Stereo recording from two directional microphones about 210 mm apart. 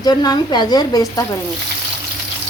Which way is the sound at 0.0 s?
20° left (ahead or behind).